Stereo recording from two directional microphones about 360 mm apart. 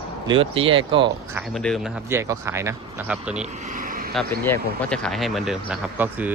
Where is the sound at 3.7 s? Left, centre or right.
Right.